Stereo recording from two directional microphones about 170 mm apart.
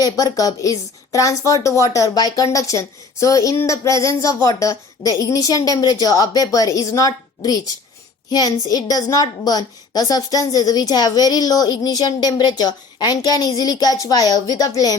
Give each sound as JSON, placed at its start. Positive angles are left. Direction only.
{"t": 0.0, "sound": "a woman's voice", "side_deg": 20}